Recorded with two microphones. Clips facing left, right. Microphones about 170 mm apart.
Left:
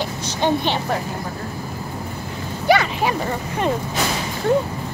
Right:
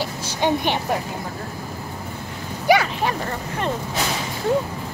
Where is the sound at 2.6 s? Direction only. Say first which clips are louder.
Even; 10° right (ahead or behind).